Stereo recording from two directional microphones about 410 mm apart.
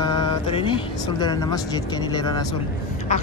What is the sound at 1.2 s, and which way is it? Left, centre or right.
Speech, centre.